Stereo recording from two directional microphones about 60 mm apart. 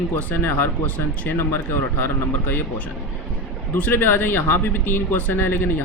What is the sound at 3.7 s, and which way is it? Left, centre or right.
Speech, left.